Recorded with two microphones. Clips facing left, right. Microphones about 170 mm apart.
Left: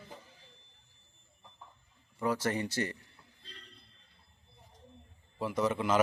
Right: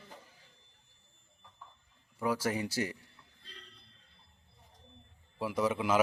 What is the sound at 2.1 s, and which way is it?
Speech, 5° right (ahead or behind).